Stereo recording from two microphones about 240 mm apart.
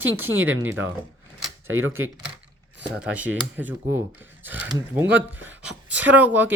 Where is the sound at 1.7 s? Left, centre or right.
Right.